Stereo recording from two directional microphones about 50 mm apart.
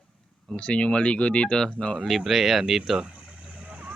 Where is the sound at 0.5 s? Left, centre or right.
Left.